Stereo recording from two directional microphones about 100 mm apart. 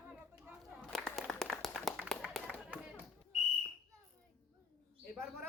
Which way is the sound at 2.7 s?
15° right (ahead or behind).